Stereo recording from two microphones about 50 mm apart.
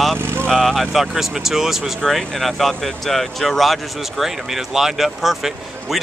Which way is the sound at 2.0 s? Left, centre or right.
Centre.